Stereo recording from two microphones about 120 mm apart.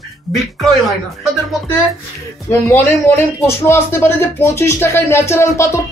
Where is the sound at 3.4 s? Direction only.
20° left (ahead or behind).